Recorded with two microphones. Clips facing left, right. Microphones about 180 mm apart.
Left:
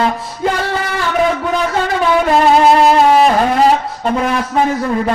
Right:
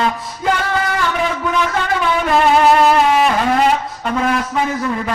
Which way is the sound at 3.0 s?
35° left (ahead or behind).